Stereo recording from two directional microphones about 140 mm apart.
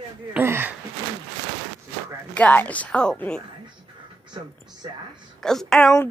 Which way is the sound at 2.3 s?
10° left (ahead or behind).